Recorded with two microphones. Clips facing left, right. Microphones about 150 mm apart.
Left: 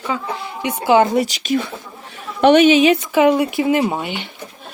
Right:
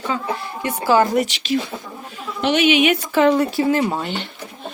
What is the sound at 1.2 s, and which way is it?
Speech, 40° left (ahead or behind).